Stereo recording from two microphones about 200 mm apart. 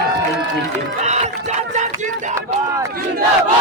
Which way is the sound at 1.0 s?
35° right (ahead or behind).